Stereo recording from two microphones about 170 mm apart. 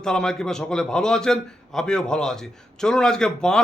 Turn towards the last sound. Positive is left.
turn(degrees=5)  # may be behind; listen again after turning